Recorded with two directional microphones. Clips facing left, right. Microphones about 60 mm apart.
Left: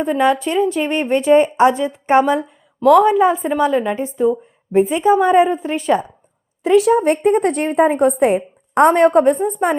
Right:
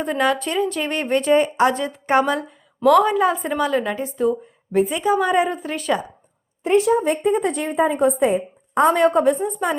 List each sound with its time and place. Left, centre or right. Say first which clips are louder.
0.3 s a woman's voice: left 5 dB; centre
6.6 s a woman's voice: left 4 dB; left
7.0 s a woman's voice: left 5 dB; left
8.9 s a woman's voice: left 3 dB; left